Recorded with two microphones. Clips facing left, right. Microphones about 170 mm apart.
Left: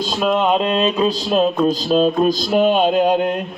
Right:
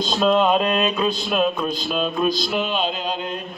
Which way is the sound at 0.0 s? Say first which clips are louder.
Even; 10° left (ahead or behind).